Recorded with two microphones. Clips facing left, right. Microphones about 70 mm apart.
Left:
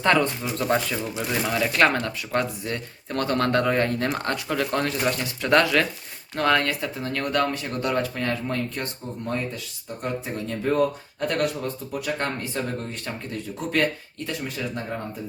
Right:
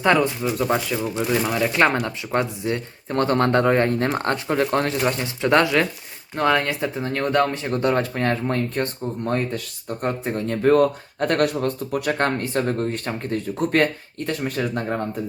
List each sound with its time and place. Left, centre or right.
0.0 s speech: centre; by 14.9 s right